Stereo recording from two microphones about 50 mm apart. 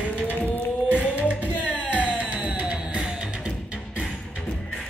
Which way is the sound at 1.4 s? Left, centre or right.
Right.